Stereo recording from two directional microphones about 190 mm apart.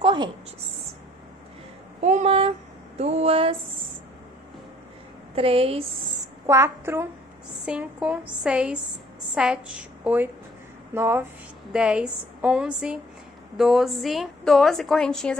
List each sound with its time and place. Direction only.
0.0 s a sound: 25° right (ahead or behind)
2.0 s speech: 40° right (ahead or behind)
5.3 s speech: 30° right (ahead or behind)
6.4 s a woman's voice: 15° right (ahead or behind); by 15.3 s 5° left (ahead or behind)